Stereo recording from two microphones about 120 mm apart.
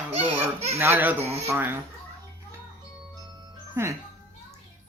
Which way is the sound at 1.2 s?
60° right (ahead or behind).